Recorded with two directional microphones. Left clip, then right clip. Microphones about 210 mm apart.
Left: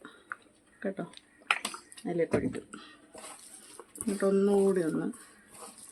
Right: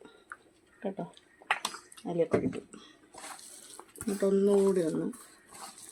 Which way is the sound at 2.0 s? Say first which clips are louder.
Right 1 dB; 15° left (ahead or behind).